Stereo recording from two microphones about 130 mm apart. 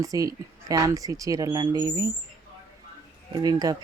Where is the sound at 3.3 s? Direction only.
30° right (ahead or behind).